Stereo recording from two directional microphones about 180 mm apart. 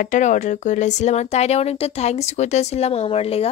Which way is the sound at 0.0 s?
45° left (ahead or behind).